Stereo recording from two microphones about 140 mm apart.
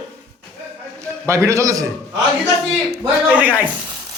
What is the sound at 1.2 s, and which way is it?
Speech, 20° right (ahead or behind).